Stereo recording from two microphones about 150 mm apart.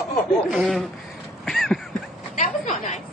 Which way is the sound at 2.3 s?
55° left (ahead or behind).